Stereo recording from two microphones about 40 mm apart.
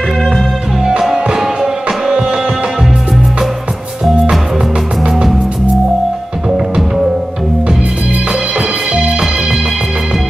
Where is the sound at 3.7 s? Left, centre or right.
Right.